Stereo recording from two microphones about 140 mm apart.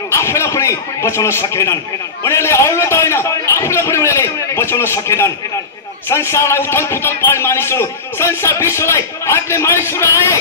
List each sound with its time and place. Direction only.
0.1 s a man's voice: 20° left (ahead or behind)